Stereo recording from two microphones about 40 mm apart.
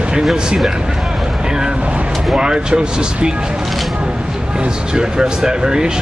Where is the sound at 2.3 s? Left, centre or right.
Right.